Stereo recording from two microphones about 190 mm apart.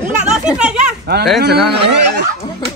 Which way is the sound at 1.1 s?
55° right (ahead or behind).